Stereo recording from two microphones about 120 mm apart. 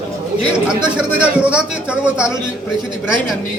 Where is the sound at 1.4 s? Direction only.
10° right (ahead or behind).